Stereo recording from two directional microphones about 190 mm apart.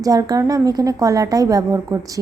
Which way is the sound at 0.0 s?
20° right (ahead or behind).